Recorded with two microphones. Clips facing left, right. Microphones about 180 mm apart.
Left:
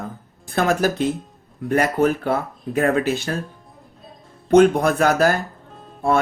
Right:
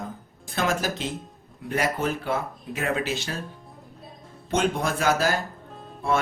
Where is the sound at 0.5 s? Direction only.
50° left (ahead or behind).